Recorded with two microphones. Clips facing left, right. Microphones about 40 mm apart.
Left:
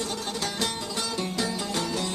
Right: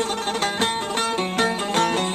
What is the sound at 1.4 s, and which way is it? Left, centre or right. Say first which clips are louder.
Music: right 10 dB; right.